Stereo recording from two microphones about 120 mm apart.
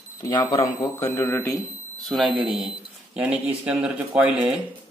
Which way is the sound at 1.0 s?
20° left (ahead or behind).